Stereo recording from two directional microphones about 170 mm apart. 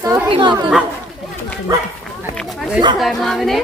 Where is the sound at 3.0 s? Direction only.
Centre (ahead or behind).